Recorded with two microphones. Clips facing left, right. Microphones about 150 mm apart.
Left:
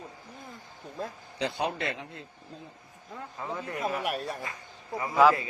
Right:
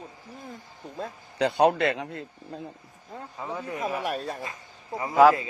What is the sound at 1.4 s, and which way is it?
Speech, 65° right (ahead or behind).